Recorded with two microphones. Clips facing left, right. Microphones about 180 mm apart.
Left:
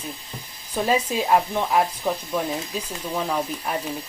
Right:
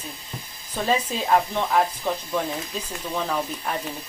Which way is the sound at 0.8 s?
10° left (ahead or behind).